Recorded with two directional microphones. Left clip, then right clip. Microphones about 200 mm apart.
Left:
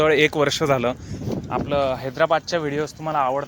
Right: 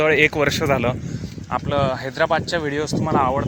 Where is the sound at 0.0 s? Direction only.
15° left (ahead or behind).